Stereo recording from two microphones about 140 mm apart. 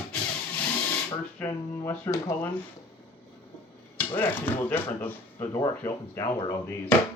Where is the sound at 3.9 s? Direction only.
15° left (ahead or behind).